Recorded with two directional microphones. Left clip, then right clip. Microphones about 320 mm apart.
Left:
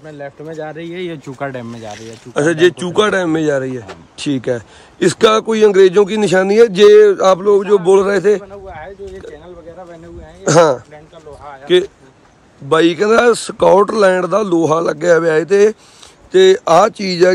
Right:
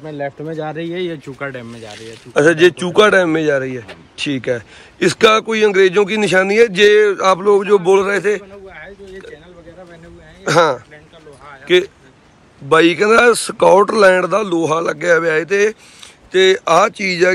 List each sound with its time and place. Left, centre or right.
0.0 s speech: centre
0.9 s speech: centre
1.4 s speech: left
2.0 s speech: centre
11.6 s speech: centre